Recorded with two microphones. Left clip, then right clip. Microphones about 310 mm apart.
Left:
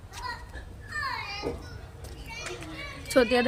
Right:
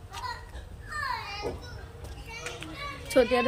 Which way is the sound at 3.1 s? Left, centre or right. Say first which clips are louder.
Left 1 dB; centre.